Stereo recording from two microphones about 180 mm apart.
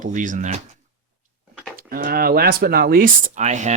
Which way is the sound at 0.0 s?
45° right (ahead or behind).